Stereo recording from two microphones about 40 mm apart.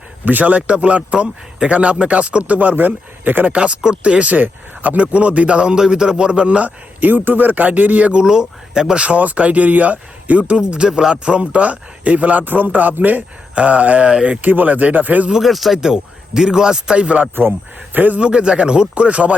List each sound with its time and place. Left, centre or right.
0.3 s speech: right
3.5 s speech: right
5.7 s speech: centre
6.7 s a man's voice: right
8.2 s speech: centre
9.0 s speech: right
10.6 s a man's voice: right
13.6 s speech: right
14.1 s speech: right
14.4 s a man's voice: right
15.3 s speech: centre
16.3 s speech: centre
17.9 s a man's voice: right
18.2 s speech: right